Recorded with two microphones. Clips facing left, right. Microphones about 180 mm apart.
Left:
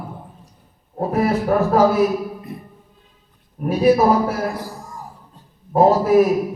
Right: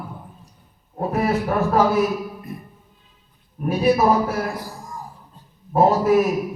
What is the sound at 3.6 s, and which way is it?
Speech, 35° left (ahead or behind).